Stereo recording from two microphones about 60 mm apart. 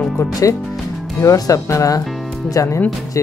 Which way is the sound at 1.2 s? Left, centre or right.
Left.